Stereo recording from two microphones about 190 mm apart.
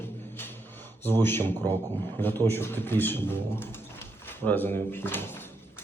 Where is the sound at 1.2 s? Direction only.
10° left (ahead or behind).